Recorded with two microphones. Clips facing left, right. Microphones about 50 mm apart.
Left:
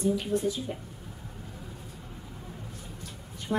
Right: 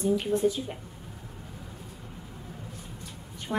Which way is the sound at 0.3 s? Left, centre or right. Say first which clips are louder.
Right 3 dB; right.